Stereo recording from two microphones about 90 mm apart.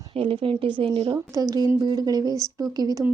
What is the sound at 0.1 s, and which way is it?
Speech, 90° right.